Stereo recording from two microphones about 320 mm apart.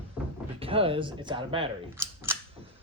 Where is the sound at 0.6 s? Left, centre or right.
Centre.